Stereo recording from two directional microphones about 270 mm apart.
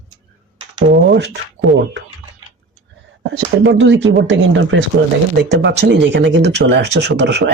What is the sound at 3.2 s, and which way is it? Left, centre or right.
Speech, right.